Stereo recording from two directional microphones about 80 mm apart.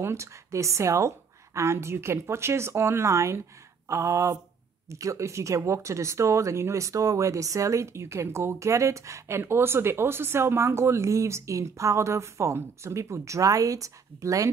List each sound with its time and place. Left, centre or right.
0.0 s speech: right